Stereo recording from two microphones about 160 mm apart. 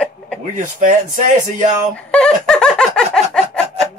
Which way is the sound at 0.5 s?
50° right (ahead or behind).